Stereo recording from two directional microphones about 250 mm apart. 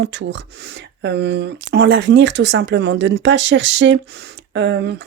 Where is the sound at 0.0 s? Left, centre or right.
Right.